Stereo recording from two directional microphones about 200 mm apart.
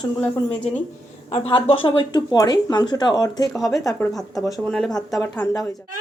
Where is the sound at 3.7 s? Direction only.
15° left (ahead or behind).